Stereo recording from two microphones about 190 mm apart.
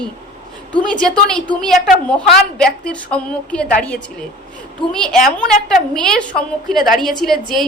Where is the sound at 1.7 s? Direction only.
5° left (ahead or behind).